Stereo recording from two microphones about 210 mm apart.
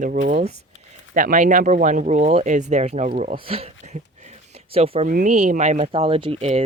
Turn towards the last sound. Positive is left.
turn(degrees=-30)  # may be behind; listen again after turning